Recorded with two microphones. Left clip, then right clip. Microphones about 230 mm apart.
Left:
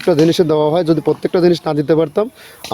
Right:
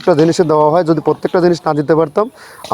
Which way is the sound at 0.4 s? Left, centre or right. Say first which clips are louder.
Right 3 dB; centre.